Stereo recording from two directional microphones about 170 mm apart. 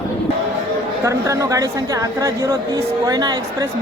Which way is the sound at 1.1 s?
20° right (ahead or behind).